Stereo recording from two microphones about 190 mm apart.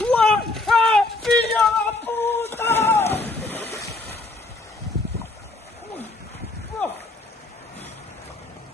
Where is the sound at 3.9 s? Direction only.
55° left (ahead or behind).